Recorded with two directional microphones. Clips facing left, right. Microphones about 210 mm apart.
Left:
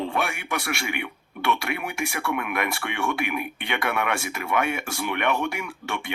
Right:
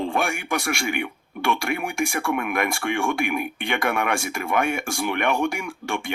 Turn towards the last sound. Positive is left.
turn(degrees=-45)  # may be behind; listen again after turning